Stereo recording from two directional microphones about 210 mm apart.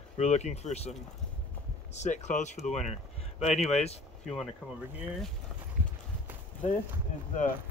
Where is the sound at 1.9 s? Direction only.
35° left (ahead or behind).